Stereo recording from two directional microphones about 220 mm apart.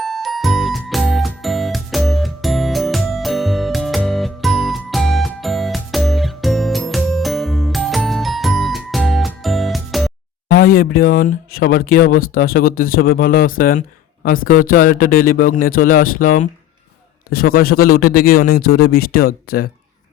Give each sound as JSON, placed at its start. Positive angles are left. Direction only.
{"t": 0.0, "sound": "music", "side_deg": 0}
{"t": 10.5, "sound": "a man's voice", "side_deg": 40}